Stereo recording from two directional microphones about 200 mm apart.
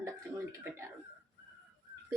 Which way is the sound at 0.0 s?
15° right (ahead or behind).